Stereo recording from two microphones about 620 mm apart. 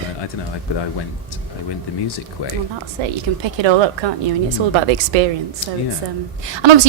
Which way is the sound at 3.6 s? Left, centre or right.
Right.